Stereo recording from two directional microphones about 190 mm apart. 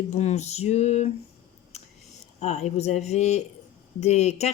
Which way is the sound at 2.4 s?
35° left (ahead or behind).